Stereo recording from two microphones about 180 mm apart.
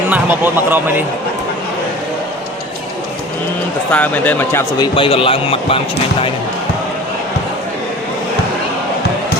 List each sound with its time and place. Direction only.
0.1 s speech: 10° right (ahead or behind)
3.9 s speech: 10° left (ahead or behind)
4.8 s a man's voice: 30° left (ahead or behind)